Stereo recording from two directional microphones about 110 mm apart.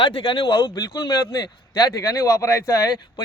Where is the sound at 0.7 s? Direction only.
35° left (ahead or behind).